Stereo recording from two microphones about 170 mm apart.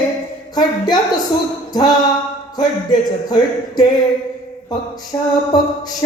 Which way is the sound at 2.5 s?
25° left (ahead or behind).